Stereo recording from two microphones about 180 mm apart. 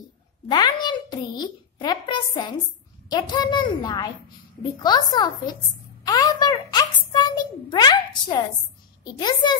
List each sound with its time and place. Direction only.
0.5 s a child's voice: 25° left (ahead or behind)
6.0 s a sound: 20° left (ahead or behind)
9.0 s a child's voice: 25° left (ahead or behind)